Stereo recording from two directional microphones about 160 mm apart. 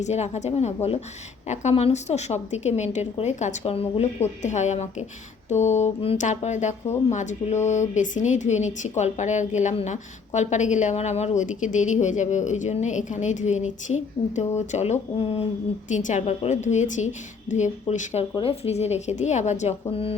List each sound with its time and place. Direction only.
0.0 s speech: 45° left (ahead or behind)
15.9 s speech: 50° left (ahead or behind)
19.9 s speech: 35° left (ahead or behind)